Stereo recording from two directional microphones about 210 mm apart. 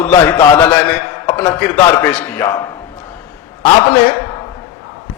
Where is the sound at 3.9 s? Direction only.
10° left (ahead or behind).